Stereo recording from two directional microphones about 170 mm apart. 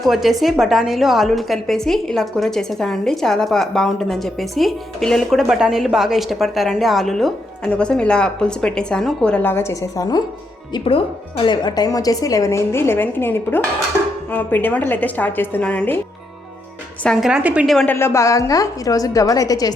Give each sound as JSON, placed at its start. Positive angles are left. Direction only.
{"t": 0.0, "sound": "a woman's voice", "side_deg": 0}
{"t": 17.0, "sound": "a woman's voice", "side_deg": 0}
{"t": 17.9, "sound": "speech", "side_deg": 15}